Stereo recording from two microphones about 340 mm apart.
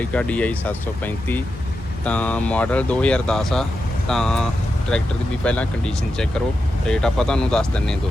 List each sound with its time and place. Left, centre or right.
0.0 s speech: centre